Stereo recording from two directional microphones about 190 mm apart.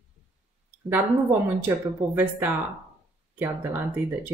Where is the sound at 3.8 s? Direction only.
5° right (ahead or behind).